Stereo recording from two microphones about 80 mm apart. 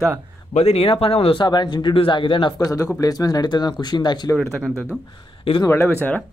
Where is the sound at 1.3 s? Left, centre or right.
Left.